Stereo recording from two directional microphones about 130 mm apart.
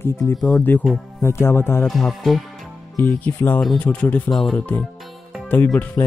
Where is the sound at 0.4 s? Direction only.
Centre (ahead or behind).